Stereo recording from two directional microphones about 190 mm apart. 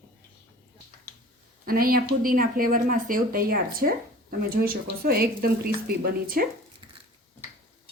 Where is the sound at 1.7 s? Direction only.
50° right (ahead or behind).